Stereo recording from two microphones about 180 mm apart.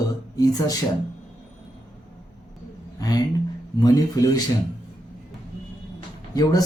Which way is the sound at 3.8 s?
20° left (ahead or behind).